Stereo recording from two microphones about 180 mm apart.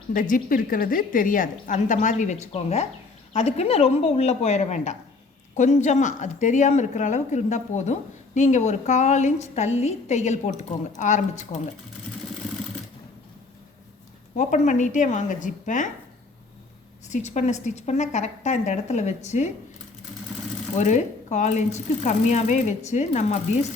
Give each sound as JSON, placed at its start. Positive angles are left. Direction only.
{"t": 0.1, "sound": "a woman's voice", "side_deg": 50}
{"t": 14.3, "sound": "a woman's voice", "side_deg": 40}
{"t": 17.1, "sound": "a woman's voice", "side_deg": 40}
{"t": 20.7, "sound": "a woman's voice", "side_deg": 40}